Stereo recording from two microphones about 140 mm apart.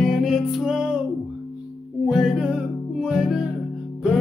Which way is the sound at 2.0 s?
Centre (ahead or behind).